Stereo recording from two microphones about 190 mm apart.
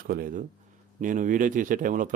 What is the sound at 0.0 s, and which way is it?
Speech, 50° right (ahead or behind).